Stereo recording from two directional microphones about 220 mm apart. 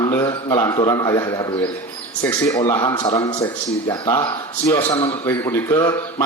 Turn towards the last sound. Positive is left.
turn(degrees=10)  # may be behind; listen again after turning